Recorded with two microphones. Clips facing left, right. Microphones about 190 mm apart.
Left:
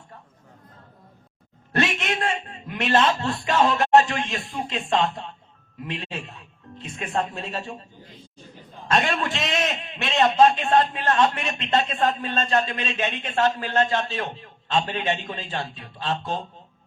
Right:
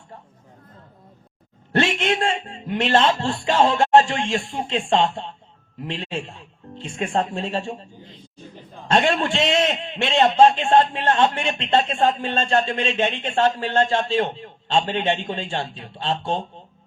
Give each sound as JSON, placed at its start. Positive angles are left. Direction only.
{"t": 1.7, "sound": "a man's voice", "side_deg": -30}
{"t": 8.9, "sound": "a man's voice", "side_deg": -25}